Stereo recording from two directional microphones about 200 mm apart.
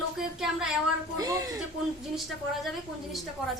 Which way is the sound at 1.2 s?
15° right (ahead or behind).